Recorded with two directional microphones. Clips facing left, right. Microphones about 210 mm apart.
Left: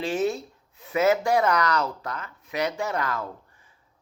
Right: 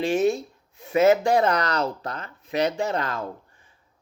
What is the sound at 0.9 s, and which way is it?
Speech, 25° right (ahead or behind).